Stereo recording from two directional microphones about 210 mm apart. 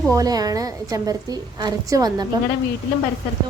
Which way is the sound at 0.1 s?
15° right (ahead or behind).